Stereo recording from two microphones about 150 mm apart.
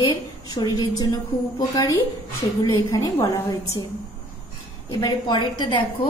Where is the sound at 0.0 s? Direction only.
25° left (ahead or behind).